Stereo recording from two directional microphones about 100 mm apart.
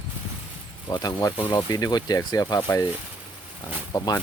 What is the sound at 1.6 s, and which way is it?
Speech, 35° left (ahead or behind).